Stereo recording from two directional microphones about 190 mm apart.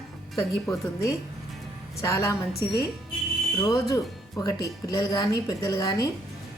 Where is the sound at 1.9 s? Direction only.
15° left (ahead or behind).